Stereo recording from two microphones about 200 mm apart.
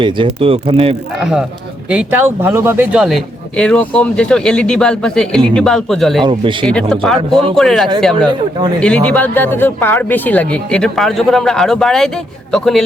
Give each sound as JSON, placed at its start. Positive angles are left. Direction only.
{"t": 0.0, "sound": "speech", "side_deg": -25}
{"t": 1.2, "sound": "speech", "side_deg": -5}
{"t": 6.2, "sound": "speech", "side_deg": -25}
{"t": 6.7, "sound": "speech", "side_deg": 5}
{"t": 8.3, "sound": "speech", "side_deg": -20}
{"t": 8.8, "sound": "speech", "side_deg": 5}